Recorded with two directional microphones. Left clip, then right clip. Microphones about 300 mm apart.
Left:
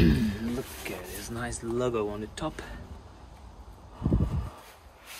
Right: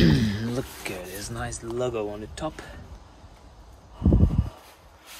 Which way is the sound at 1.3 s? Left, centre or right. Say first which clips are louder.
Right 1 dB; centre.